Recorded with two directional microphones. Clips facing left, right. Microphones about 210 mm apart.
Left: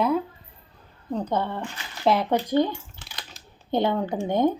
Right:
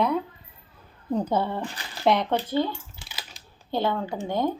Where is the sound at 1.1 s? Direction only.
10° right (ahead or behind).